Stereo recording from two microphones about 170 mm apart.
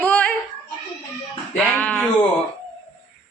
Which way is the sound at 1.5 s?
5° left (ahead or behind).